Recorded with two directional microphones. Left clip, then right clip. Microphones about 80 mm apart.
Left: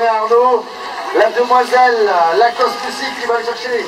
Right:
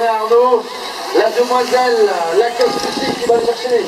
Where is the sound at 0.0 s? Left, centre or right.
Left.